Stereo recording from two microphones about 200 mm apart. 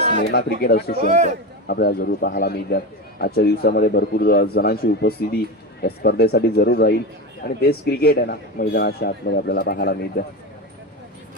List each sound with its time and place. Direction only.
0.6 s a man's voice: 50° left (ahead or behind)
1.0 s speech: 40° right (ahead or behind)
1.6 s a man's voice: 50° left (ahead or behind)